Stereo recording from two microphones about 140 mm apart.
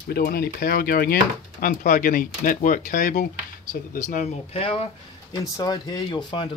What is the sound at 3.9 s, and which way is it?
Speech, 60° left (ahead or behind).